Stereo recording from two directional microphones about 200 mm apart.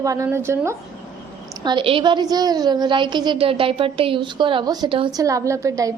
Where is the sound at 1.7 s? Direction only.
25° right (ahead or behind).